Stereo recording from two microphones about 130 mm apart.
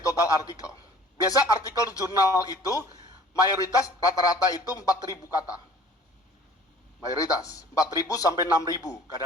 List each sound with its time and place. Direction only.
0.0 s a man's voice: 25° left (ahead or behind)
7.2 s a man's voice: 25° left (ahead or behind)